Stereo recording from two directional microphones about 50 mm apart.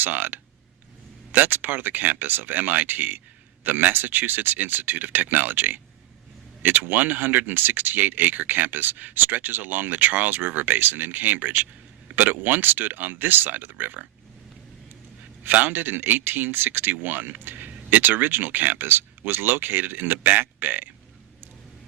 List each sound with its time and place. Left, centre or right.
0.0 s speech: right
15.4 s speech: right